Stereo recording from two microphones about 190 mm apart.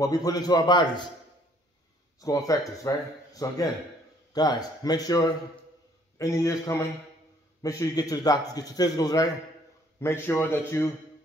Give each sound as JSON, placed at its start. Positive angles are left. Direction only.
{"t": 0.0, "sound": "a man's voice", "side_deg": 20}
{"t": 2.1, "sound": "a man's voice", "side_deg": 15}